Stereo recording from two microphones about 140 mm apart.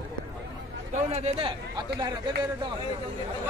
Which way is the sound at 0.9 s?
50° right (ahead or behind).